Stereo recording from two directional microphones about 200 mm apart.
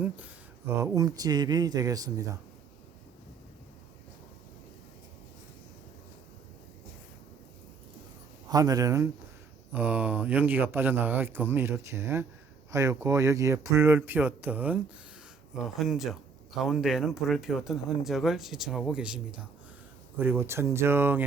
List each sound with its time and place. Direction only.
0.8 s speech: 15° right (ahead or behind)
8.4 s speech: 20° right (ahead or behind)